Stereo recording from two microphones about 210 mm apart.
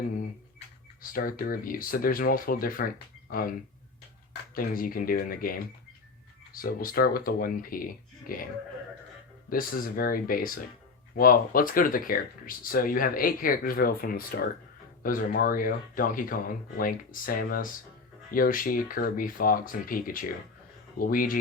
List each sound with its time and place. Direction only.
1.1 s speech: 40° left (ahead or behind)
4.5 s speech: 40° left (ahead or behind)
9.5 s speech: 45° left (ahead or behind)